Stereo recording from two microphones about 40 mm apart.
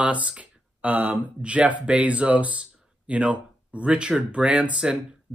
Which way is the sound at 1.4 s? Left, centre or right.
Right.